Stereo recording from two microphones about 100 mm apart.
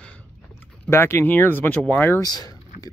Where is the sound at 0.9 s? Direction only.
25° left (ahead or behind).